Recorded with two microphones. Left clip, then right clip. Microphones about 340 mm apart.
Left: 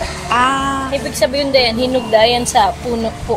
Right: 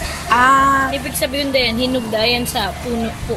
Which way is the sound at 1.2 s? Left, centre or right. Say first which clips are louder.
Left 4 dB; centre.